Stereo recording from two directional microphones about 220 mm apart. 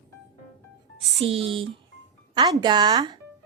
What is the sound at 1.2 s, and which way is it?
A woman's voice, 25° right (ahead or behind).